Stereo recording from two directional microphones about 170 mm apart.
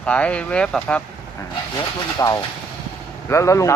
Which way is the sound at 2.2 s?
15° left (ahead or behind).